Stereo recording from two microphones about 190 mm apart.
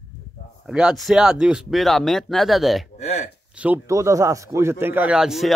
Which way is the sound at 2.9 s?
35° left (ahead or behind).